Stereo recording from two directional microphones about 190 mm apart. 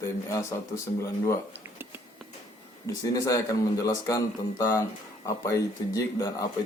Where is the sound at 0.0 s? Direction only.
15° left (ahead or behind).